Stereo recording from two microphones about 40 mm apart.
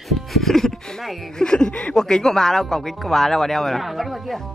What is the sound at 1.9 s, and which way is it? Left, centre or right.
Speech, centre.